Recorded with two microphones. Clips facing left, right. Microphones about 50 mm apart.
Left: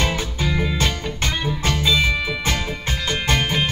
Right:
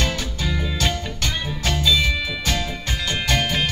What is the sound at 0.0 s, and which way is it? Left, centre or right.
Music, left.